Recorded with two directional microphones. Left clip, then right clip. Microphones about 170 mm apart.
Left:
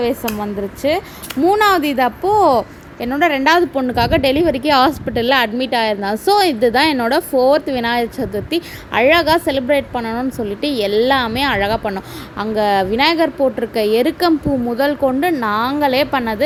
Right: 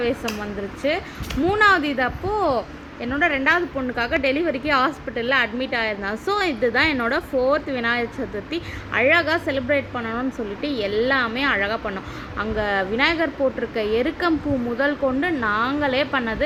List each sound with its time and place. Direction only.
0.0 s a woman's voice: 25° left (ahead or behind)